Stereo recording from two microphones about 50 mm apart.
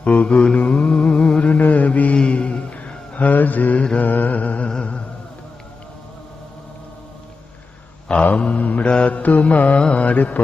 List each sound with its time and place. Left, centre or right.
0.0 s mantra: left
4.7 s music: left
8.2 s mantra: left